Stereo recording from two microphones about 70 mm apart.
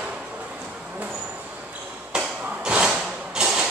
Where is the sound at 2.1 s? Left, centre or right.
Centre.